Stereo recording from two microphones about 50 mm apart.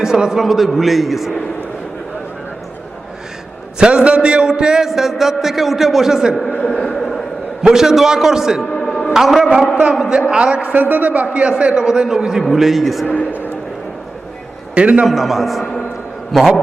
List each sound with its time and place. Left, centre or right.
0.0 s a man's voice: centre
3.8 s a man's voice: centre
6.7 s a sound: centre
7.6 s a man's voice: centre
8.7 s music: centre
9.1 s a man's voice: centre; by 11.5 s right
11.5 s a man's voice: centre
14.8 s a man's voice: right
15.0 s a man's voice: centre